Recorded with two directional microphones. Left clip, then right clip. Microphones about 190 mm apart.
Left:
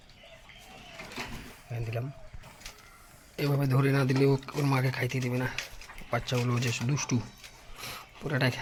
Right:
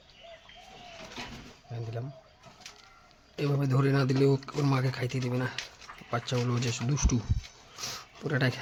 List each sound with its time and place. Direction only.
1.7 s speech: 10° left (ahead or behind)
3.3 s speech: 10° right (ahead or behind)
7.8 s a sound: 30° right (ahead or behind)